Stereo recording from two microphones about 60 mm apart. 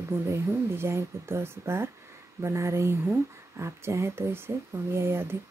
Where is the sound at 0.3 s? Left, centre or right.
Right.